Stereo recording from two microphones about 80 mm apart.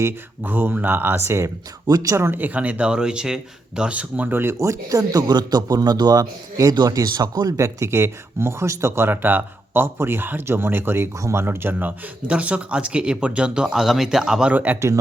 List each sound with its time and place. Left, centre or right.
0.0 s speech: right
1.9 s speech: right
2.3 s speech: right
7.5 s speech: right; by 14.5 s centre
14.5 s speech: right